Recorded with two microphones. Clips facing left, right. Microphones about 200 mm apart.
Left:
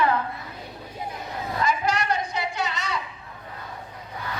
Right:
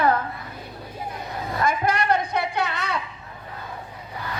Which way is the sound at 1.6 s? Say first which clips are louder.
Right 2 dB; 55° right (ahead or behind).